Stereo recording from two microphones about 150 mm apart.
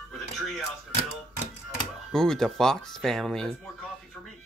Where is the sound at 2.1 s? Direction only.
5° left (ahead or behind).